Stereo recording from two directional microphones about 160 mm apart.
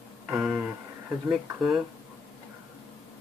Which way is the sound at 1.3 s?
5° right (ahead or behind).